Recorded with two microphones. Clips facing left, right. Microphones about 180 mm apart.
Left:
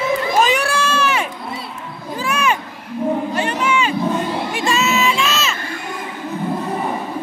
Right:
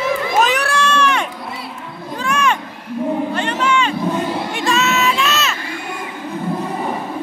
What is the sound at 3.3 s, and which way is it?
Crowd, 10° left (ahead or behind).